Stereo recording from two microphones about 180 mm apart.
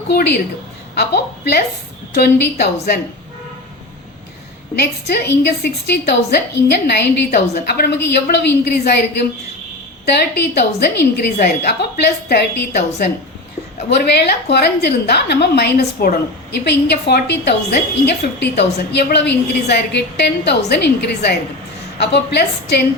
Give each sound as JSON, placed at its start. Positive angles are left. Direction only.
{"t": 0.1, "sound": "a woman's voice", "side_deg": 65}
{"t": 5.4, "sound": "a woman's voice", "side_deg": 70}